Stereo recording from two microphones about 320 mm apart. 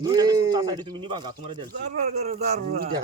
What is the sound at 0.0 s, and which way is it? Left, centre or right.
Speech, centre.